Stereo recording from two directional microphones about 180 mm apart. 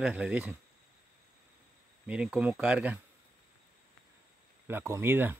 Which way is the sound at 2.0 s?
5° right (ahead or behind).